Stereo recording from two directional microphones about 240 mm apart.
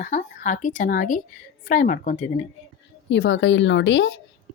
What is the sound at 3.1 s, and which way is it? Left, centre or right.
A woman's voice, left.